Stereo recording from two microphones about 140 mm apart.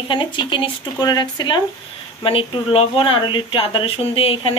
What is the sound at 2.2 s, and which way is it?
Speech, 40° left (ahead or behind).